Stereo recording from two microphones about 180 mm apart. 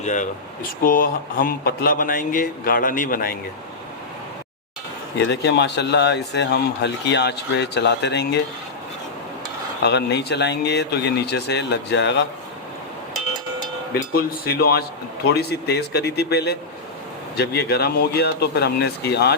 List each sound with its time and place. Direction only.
0.0 s a man's voice: 45° left (ahead or behind)
5.3 s speech: 75° left (ahead or behind)
9.8 s speech: 70° left (ahead or behind)
13.9 s speech: 60° left (ahead or behind)